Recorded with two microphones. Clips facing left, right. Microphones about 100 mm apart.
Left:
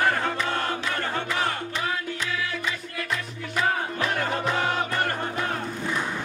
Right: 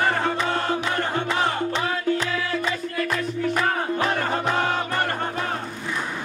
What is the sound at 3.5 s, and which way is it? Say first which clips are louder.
Music: left 1 dB; 45° right (ahead or behind).